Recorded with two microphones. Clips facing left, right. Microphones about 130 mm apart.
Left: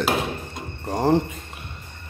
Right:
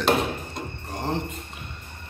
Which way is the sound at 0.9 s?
40° left (ahead or behind).